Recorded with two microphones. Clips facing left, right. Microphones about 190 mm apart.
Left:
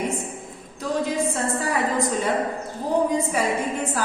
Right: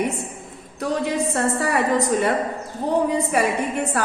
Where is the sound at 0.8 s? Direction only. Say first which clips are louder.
Right 1 dB; 65° right (ahead or behind).